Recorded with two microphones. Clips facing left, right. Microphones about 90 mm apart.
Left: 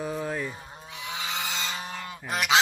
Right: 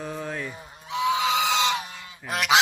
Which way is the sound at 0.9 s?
90° right.